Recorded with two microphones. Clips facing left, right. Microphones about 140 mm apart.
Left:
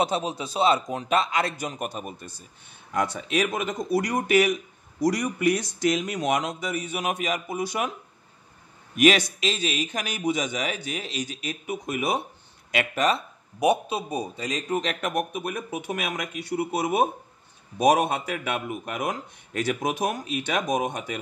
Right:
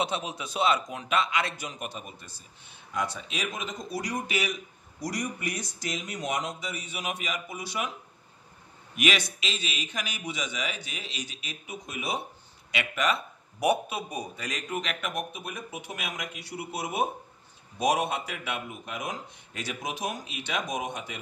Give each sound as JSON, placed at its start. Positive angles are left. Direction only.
{"t": 0.0, "sound": "a man's voice", "side_deg": 35}
{"t": 5.0, "sound": "speech", "side_deg": 90}
{"t": 6.6, "sound": "speech", "side_deg": 50}
{"t": 8.9, "sound": "speech", "side_deg": 45}
{"t": 12.7, "sound": "a man's voice", "side_deg": 40}
{"t": 13.6, "sound": "speech", "side_deg": 25}